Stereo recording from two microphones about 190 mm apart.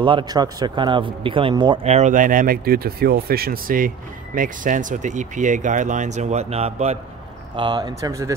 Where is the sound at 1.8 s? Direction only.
35° right (ahead or behind).